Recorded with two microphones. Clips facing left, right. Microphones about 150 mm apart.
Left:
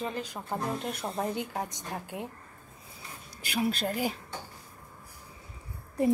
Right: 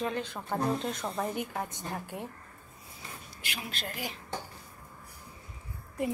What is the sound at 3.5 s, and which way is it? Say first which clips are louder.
Speech: left 11 dB; 40° left (ahead or behind).